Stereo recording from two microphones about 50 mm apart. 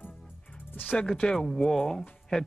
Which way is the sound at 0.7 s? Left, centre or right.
Left.